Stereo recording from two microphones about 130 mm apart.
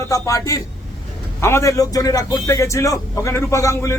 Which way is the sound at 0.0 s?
25° left (ahead or behind).